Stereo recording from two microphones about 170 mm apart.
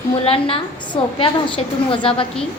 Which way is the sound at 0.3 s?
35° left (ahead or behind).